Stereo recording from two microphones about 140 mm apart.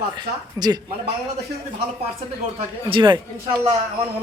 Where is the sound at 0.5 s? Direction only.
30° right (ahead or behind).